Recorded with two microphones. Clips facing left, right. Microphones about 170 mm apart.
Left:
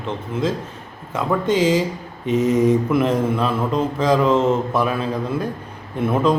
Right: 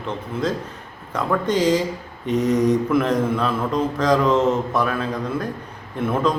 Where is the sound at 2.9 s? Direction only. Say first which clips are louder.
Left 1 dB; 25° left (ahead or behind).